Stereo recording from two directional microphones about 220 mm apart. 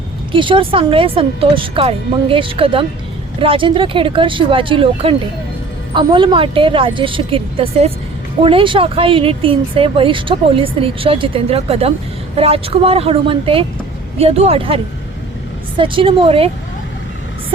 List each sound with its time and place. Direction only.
0.3 s speech: 20° right (ahead or behind)
15.8 s speech: 25° right (ahead or behind)